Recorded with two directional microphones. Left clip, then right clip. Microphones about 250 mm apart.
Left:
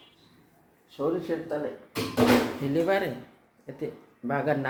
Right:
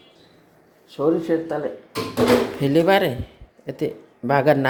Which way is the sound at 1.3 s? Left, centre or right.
Right.